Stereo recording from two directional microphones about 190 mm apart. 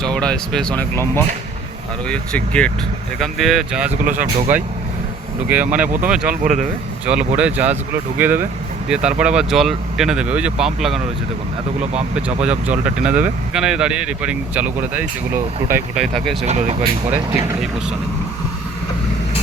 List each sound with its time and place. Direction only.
0.0 s speech: 5° left (ahead or behind)
4.0 s speech: 45° right (ahead or behind)
4.5 s speech: 10° right (ahead or behind)
6.2 s speech: 40° right (ahead or behind)
7.0 s speech: 5° right (ahead or behind)
12.1 s speech: 5° right (ahead or behind)
16.5 s speech: 35° right (ahead or behind)